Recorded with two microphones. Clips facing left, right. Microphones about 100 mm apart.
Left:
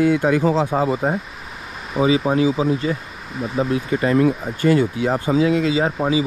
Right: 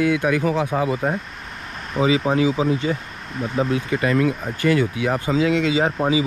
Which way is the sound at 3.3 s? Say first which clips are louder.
Left 1 dB; centre (ahead or behind).